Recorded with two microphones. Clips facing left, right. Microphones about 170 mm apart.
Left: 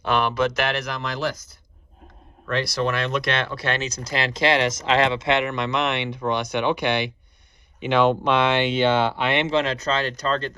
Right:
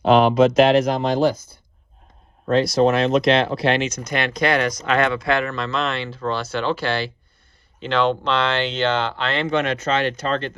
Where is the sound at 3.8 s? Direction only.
30° left (ahead or behind).